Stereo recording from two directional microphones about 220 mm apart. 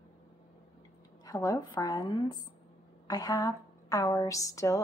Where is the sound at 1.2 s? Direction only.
15° left (ahead or behind).